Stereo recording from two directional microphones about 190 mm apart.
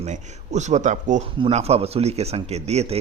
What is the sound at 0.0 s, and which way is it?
A man's voice, 35° right (ahead or behind).